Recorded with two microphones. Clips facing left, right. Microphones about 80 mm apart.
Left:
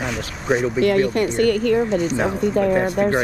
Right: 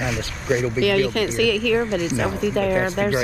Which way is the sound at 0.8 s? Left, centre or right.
Right.